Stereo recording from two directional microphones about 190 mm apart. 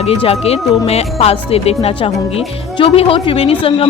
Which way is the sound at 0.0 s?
30° left (ahead or behind).